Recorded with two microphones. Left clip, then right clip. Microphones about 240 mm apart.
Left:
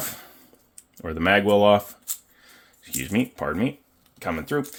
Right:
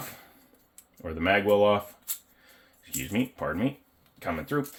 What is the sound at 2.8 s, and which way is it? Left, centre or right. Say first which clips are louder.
Speech: left 5 dB; left.